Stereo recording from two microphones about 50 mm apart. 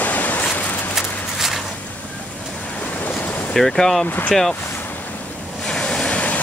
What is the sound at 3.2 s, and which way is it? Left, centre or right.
Ocean, left.